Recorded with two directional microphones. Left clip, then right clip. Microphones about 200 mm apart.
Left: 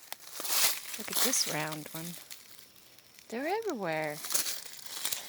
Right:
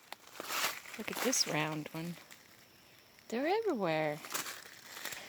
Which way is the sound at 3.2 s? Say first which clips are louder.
Even; 10° right (ahead or behind).